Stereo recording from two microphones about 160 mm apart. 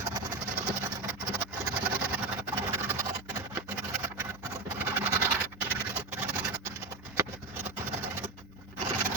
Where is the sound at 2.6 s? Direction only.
15° right (ahead or behind).